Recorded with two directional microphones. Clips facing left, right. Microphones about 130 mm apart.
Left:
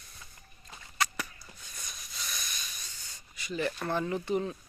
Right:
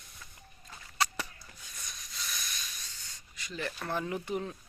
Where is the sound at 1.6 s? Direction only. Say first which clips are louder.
Left 1 dB; centre (ahead or behind).